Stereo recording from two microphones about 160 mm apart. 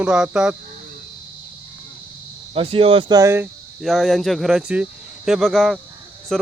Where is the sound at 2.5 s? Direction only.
35° right (ahead or behind); by 3.5 s 15° right (ahead or behind).